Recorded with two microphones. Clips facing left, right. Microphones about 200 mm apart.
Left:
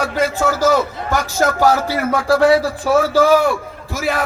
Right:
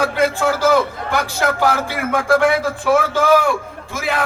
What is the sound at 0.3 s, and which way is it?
A man's voice, 40° left (ahead or behind).